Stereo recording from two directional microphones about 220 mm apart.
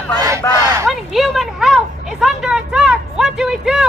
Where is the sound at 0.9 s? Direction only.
Centre (ahead or behind).